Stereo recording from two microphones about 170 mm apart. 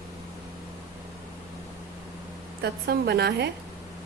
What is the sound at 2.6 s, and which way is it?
Speech, 75° right (ahead or behind).